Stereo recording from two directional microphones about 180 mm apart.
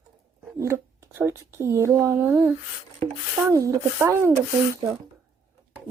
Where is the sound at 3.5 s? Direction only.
20° right (ahead or behind).